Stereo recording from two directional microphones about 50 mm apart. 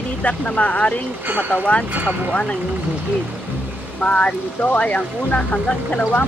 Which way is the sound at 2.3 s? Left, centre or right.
Left.